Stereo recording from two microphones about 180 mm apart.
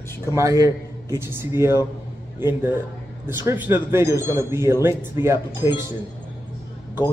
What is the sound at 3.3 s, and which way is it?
A man's voice, 10° right (ahead or behind).